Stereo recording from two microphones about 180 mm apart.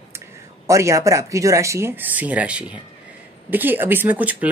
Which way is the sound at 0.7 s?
15° right (ahead or behind).